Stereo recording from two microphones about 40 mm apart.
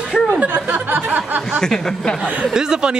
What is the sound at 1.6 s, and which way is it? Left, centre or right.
Speech, centre.